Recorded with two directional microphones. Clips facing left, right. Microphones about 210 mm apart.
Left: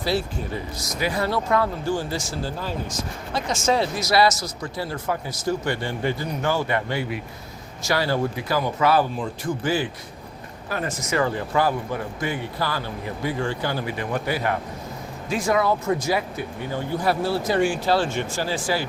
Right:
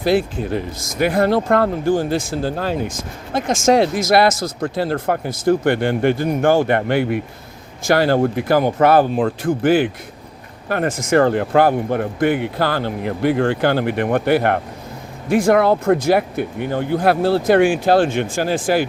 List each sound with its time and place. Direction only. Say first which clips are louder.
0.1 s speech: right 8 dB; 55° right (ahead or behind)
3.3 s speech: right 7 dB; 50° right (ahead or behind)
3.6 s speech: right 8 dB; 80° right
4.0 s speech: right 5 dB; 55° right (ahead or behind)